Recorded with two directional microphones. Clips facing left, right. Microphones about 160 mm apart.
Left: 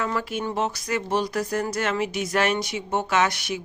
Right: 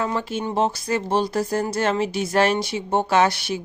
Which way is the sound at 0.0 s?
25° right (ahead or behind).